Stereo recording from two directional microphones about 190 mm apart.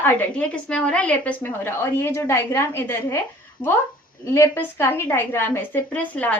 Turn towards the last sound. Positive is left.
turn(degrees=10)  # may be behind; listen again after turning